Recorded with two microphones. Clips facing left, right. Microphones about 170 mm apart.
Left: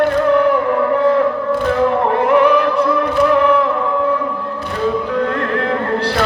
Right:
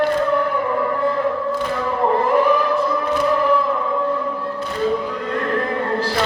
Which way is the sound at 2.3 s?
75° left (ahead or behind).